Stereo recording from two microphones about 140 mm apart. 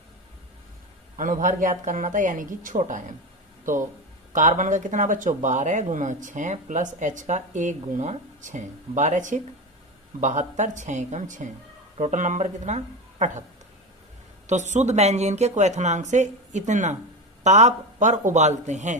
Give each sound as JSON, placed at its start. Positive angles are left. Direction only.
{"t": 1.1, "sound": "speech", "side_deg": -70}
{"t": 14.4, "sound": "speech", "side_deg": -60}